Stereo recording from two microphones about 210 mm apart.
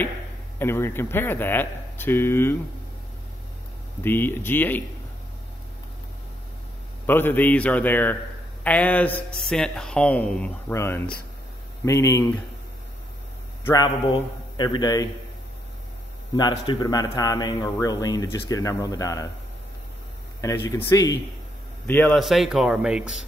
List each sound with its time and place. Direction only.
0.6 s speech: 10° left (ahead or behind)
4.0 s speech: 10° left (ahead or behind)
7.1 s speech: 10° left (ahead or behind)
13.7 s a man's voice: 20° left (ahead or behind)
16.3 s speech: 20° left (ahead or behind)
20.3 s a man's voice: 10° left (ahead or behind); by 23.2 s 5° right (ahead or behind)